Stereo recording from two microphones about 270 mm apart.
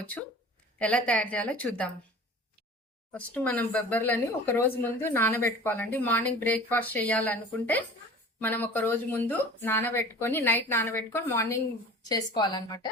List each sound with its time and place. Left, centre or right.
0.8 s a woman's voice: centre
3.1 s speech: centre